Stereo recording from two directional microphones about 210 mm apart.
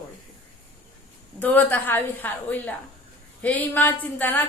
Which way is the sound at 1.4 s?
10° left (ahead or behind).